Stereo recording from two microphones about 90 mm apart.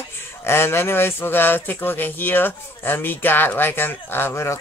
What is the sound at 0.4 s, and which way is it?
Speech, 25° left (ahead or behind).